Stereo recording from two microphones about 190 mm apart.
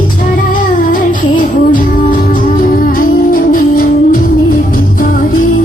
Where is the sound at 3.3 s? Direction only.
45° left (ahead or behind).